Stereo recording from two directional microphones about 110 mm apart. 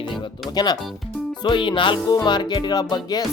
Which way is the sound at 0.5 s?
40° left (ahead or behind).